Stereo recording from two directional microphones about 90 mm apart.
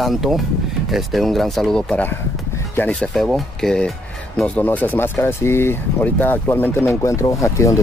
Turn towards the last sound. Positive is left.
turn(degrees=35)  # may be behind; listen again after turning